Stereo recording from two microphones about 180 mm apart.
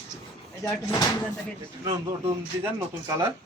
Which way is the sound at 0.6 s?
20° left (ahead or behind).